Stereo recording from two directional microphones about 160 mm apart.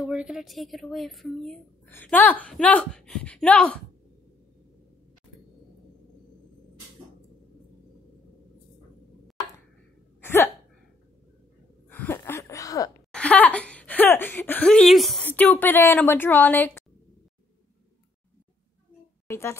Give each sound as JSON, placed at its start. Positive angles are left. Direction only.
{"t": 0.0, "sound": "speech", "side_deg": -5}
{"t": 10.2, "sound": "hiccup", "side_deg": 15}
{"t": 11.9, "sound": "a sound", "side_deg": 15}
{"t": 13.1, "sound": "speech", "side_deg": 10}
{"t": 19.2, "sound": "a woman's voice", "side_deg": 15}